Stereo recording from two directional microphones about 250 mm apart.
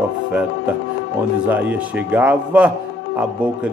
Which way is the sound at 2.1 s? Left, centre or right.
Centre.